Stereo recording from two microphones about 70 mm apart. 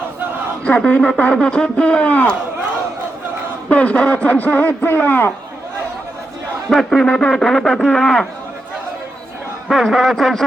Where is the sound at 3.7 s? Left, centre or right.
Centre.